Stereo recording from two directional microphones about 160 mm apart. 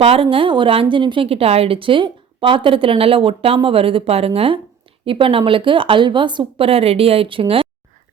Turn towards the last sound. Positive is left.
turn(degrees=-35)  # may be behind; listen again after turning